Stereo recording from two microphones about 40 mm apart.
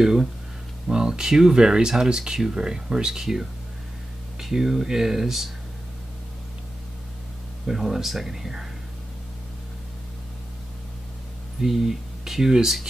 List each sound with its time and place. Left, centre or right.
0.0 s speech: centre
7.6 s speech: centre
11.6 s speech: centre